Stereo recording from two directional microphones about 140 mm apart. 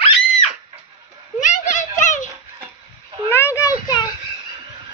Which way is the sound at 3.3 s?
20° left (ahead or behind).